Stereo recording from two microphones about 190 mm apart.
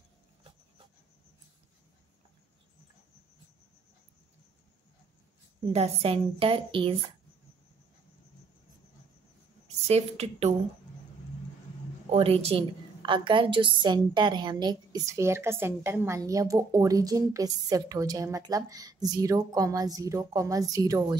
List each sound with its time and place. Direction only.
5.7 s a woman's voice: 30° right (ahead or behind)
9.8 s a woman's voice: 35° right (ahead or behind)
12.1 s a woman's voice: 30° right (ahead or behind)